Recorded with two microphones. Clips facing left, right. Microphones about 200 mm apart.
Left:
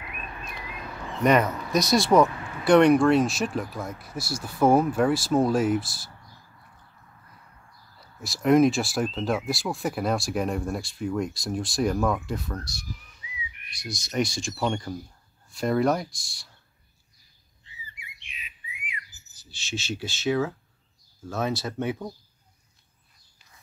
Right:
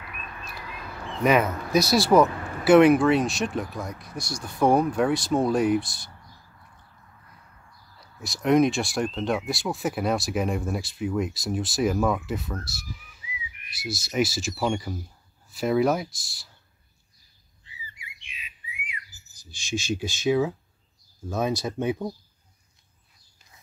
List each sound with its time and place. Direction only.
1.2 s speech: 5° right (ahead or behind)
8.0 s speech: centre (ahead or behind)
19.3 s speech: 15° right (ahead or behind)